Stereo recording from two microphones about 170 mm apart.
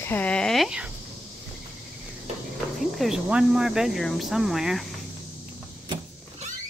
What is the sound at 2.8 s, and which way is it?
Speech, centre (ahead or behind).